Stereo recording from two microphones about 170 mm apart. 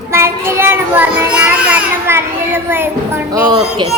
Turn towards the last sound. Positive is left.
turn(degrees=-25)  # may be behind; listen again after turning